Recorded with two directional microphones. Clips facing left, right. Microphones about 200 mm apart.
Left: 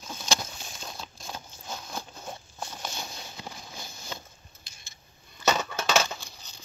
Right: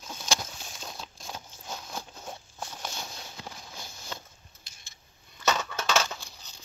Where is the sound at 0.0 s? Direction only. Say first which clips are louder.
Left 1 dB; 5° right (ahead or behind).